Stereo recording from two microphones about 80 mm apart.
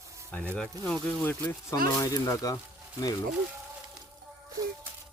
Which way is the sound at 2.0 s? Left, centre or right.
Left.